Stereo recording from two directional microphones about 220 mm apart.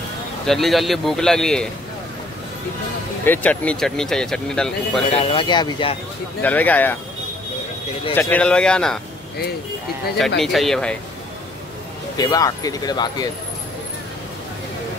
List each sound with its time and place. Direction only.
0.5 s speech: centre (ahead or behind)
3.3 s speech: 5° left (ahead or behind)
5.1 s speech: 25° left (ahead or behind)
6.4 s speech: 5° left (ahead or behind)
8.1 s speech: 10° left (ahead or behind)
10.4 s speech: centre (ahead or behind)
12.2 s speech: 15° left (ahead or behind)